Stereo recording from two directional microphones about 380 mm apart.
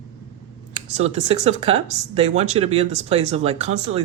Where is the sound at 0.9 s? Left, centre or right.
Centre.